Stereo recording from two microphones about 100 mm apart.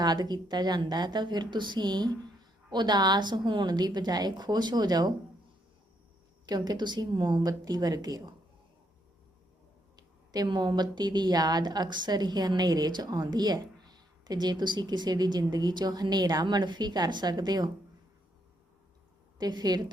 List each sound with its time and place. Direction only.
0.0 s a woman's voice: 45° right (ahead or behind)
6.4 s a woman's voice: 45° right (ahead or behind)
9.9 s a woman's voice: 40° right (ahead or behind)
19.4 s a woman's voice: 45° right (ahead or behind)